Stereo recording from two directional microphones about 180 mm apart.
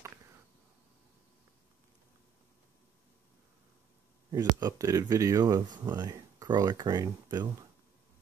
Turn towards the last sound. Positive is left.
turn(degrees=-25)  # may be behind; listen again after turning